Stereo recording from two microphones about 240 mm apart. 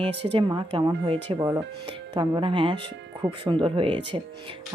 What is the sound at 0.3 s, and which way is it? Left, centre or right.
Speech, centre.